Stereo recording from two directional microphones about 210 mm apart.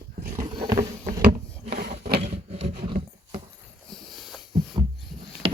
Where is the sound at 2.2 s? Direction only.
30° right (ahead or behind).